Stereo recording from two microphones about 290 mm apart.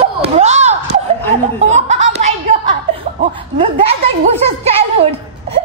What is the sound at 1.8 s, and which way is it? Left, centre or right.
Chuckle, right.